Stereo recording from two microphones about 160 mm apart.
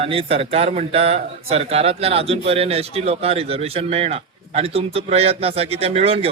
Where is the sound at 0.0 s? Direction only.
40° right (ahead or behind).